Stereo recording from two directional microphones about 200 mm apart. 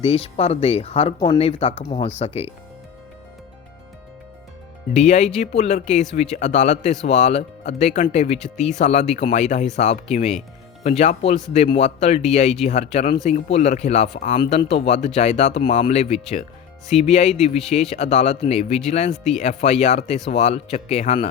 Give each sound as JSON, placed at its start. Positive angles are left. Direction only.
{"t": 0.0, "sound": "speech", "side_deg": 30}
{"t": 4.9, "sound": "speech", "side_deg": 35}
{"t": 19.1, "sound": "speech", "side_deg": 0}
{"t": 19.4, "sound": "speech", "side_deg": 35}